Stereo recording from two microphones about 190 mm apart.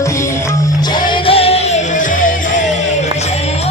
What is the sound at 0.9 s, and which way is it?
Music, 30° left (ahead or behind).